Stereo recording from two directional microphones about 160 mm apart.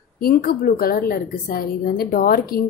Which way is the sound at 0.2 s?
70° left (ahead or behind).